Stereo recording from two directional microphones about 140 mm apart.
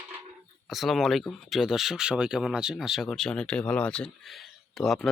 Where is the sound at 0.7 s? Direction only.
Centre (ahead or behind).